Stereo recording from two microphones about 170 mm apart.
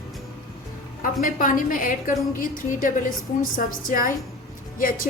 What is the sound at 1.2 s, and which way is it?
A woman's voice, 55° left (ahead or behind).